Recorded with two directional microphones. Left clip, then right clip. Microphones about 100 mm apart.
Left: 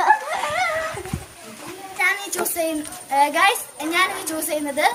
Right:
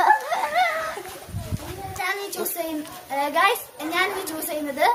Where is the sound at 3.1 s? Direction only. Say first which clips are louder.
Left 4 dB; 20° right (ahead or behind).